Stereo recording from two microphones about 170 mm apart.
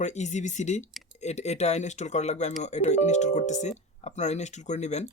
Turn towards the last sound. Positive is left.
turn(degrees=40)  # may be behind; listen again after turning